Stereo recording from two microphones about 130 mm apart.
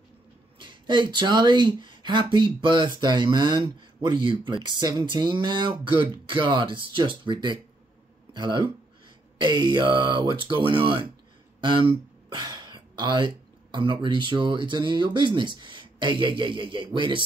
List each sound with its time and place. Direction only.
0.6 s speech: 35° right (ahead or behind)